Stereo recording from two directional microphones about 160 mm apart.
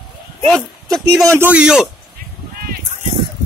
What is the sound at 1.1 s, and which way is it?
Speech, 15° right (ahead or behind).